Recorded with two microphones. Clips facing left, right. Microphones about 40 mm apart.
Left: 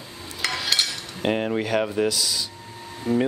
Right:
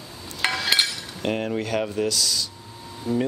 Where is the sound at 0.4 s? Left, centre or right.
Right.